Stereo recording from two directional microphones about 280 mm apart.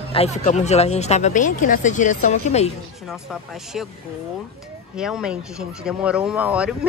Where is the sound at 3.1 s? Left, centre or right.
Centre.